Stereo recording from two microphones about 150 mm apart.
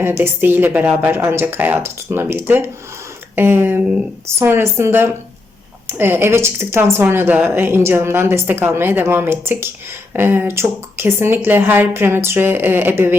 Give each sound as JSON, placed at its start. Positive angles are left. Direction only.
{"t": 0.0, "sound": "speech", "side_deg": -15}